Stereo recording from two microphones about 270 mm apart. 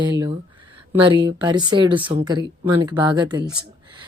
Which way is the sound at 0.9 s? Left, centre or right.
Centre.